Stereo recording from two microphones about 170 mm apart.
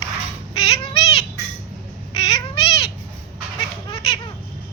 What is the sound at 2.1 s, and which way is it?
Cat, 30° left (ahead or behind).